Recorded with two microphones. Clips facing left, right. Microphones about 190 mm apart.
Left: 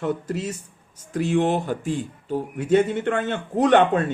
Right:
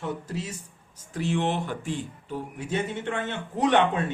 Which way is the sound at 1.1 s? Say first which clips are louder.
Left 6 dB; 45° left (ahead or behind).